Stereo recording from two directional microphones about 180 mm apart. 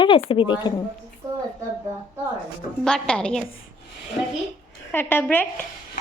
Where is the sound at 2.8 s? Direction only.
5° left (ahead or behind).